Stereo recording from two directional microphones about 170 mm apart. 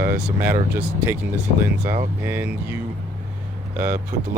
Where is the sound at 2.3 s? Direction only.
10° right (ahead or behind).